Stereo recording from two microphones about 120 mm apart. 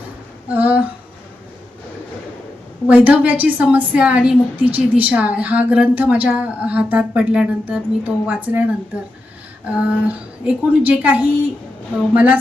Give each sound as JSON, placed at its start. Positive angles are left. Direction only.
{"t": 0.4, "sound": "speech", "side_deg": -15}
{"t": 2.8, "sound": "a woman's voice", "side_deg": -10}
{"t": 9.7, "sound": "a woman's voice", "side_deg": -10}